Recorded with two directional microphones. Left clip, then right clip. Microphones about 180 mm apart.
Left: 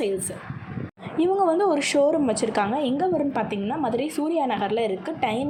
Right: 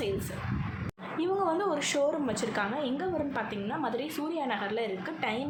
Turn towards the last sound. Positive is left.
turn(degrees=30)  # may be behind; listen again after turning